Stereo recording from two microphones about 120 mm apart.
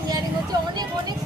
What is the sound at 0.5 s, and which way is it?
Speech, 35° right (ahead or behind).